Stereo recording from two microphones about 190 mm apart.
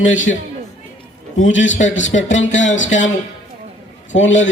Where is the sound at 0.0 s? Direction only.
90° left.